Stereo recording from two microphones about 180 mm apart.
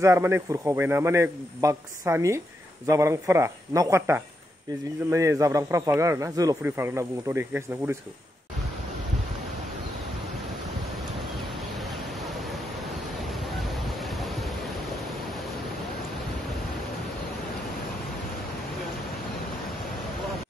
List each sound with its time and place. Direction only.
0.0 s a man's voice: 15° right (ahead or behind)
11.7 s pink noise: centre (ahead or behind)